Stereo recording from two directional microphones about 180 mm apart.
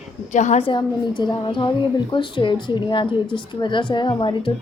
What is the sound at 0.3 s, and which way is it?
A woman's voice, 40° left (ahead or behind).